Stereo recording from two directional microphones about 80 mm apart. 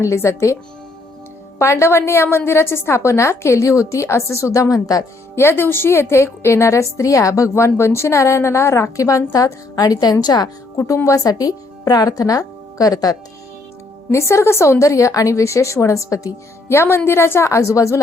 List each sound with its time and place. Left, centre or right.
0.0 s a woman's voice: left
1.5 s a woman's voice: left
5.3 s a woman's voice: left
10.8 s speech: left
14.1 s a woman's voice: left
16.6 s a woman's voice: left